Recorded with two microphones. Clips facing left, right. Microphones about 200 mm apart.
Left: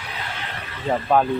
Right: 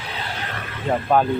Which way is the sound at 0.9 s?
Centre (ahead or behind).